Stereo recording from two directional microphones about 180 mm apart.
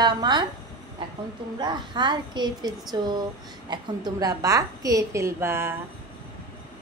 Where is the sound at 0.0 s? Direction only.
25° right (ahead or behind).